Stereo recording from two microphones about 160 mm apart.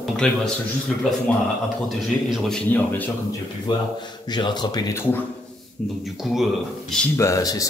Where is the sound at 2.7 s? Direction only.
10° left (ahead or behind).